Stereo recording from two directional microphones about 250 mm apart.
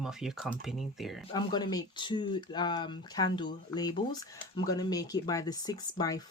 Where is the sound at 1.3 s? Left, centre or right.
Centre.